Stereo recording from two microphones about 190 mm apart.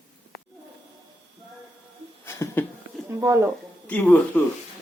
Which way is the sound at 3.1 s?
15° right (ahead or behind).